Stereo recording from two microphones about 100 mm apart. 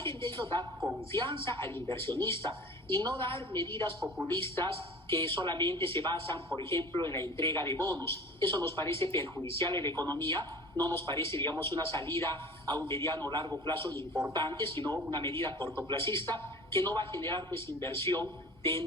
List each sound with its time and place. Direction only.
0.0 s a woman's voice: 25° left (ahead or behind)
14.1 s speech: 10° right (ahead or behind)
14.6 s speech: 25° left (ahead or behind)
18.6 s music: 25° left (ahead or behind)